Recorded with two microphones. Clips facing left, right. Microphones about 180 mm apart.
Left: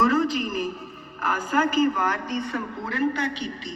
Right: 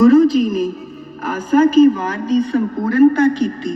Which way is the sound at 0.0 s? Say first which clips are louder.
Right 12 dB; 35° right (ahead or behind).